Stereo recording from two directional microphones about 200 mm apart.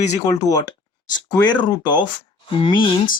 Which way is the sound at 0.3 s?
20° left (ahead or behind).